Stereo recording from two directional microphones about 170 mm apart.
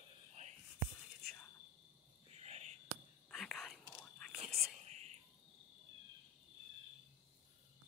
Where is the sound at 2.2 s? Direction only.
40° right (ahead or behind).